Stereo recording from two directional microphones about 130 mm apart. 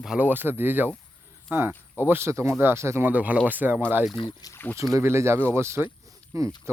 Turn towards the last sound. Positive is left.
turn(degrees=-25)  # may be behind; listen again after turning